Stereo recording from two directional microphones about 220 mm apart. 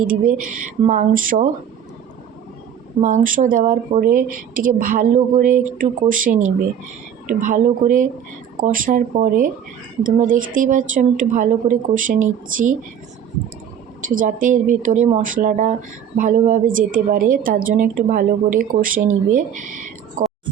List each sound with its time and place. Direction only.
0.1 s a woman's voice: 40° right (ahead or behind)
3.0 s a woman's voice: 35° right (ahead or behind)
14.1 s a woman's voice: 40° right (ahead or behind)